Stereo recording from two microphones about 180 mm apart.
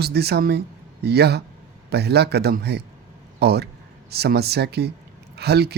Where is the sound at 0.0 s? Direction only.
65° right (ahead or behind).